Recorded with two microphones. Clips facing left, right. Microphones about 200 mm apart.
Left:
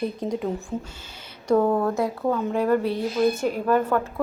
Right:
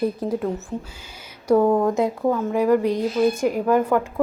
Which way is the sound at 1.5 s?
10° right (ahead or behind).